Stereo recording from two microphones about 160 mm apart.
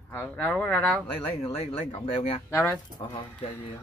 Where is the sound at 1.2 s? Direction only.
35° left (ahead or behind).